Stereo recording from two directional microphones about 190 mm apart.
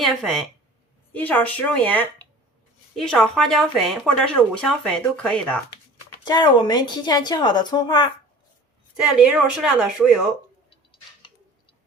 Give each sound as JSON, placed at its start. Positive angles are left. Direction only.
{"t": 0.0, "sound": "speech", "side_deg": 0}
{"t": 6.2, "sound": "a woman's voice", "side_deg": 20}
{"t": 9.0, "sound": "speech", "side_deg": -5}
{"t": 10.7, "sound": "a sound", "side_deg": 25}